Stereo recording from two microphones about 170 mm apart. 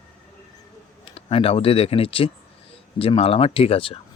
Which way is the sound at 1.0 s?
35° left (ahead or behind).